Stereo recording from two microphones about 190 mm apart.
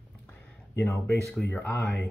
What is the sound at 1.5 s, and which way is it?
Speech, 10° left (ahead or behind).